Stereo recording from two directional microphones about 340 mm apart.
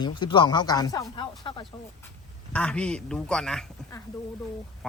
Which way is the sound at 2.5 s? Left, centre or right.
Centre.